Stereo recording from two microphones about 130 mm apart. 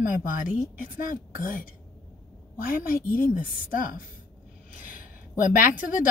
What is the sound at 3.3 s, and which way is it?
Speech, 90° left.